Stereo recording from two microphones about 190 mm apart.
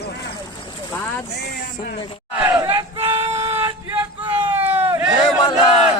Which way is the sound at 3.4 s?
10° right (ahead or behind).